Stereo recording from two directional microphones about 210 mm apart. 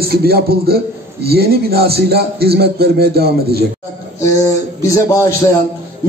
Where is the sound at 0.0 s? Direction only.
50° right (ahead or behind).